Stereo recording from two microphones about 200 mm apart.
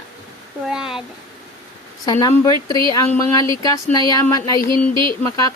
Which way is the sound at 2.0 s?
20° left (ahead or behind).